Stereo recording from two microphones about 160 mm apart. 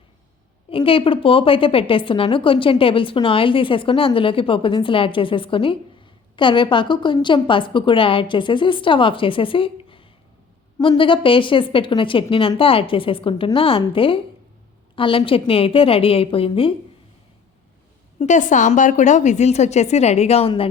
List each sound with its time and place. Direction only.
0.7 s a woman's voice: 35° left (ahead or behind)
18.2 s a woman's voice: 50° left (ahead or behind)